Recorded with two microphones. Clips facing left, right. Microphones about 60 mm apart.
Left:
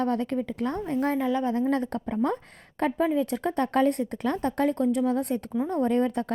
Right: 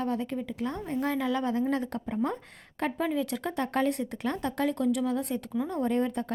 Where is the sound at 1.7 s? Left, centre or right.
Left.